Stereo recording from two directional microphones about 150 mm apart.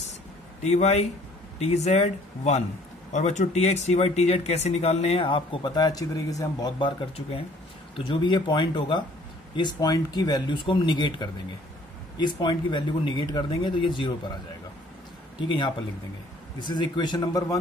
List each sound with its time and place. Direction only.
0.6 s speech: 50° left (ahead or behind); by 14.1 s 35° left (ahead or behind)
15.4 s speech: 30° left (ahead or behind)